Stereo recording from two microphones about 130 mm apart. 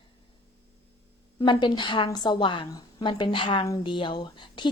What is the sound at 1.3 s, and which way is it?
A woman's voice, 40° left (ahead or behind).